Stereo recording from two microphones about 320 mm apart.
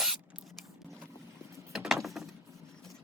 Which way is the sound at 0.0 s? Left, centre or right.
Centre.